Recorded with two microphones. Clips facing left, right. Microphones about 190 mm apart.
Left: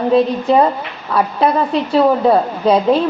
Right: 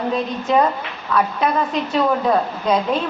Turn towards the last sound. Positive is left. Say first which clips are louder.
# left 6 dB
turn(degrees=35)  # may be behind; listen again after turning